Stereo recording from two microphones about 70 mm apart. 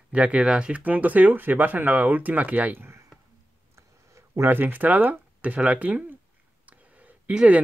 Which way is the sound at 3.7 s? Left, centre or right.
Right.